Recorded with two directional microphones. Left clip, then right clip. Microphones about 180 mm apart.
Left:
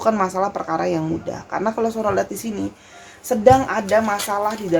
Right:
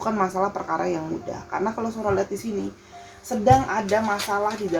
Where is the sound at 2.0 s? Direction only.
50° left (ahead or behind).